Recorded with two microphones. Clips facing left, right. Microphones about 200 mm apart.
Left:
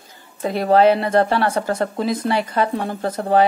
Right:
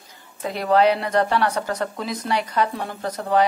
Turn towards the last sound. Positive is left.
turn(degrees=30)  # may be behind; listen again after turning